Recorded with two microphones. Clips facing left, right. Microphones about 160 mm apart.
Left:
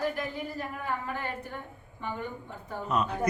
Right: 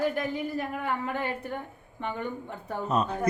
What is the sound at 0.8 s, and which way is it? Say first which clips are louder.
A woman's voice: right 1 dB; 65° right (ahead or behind).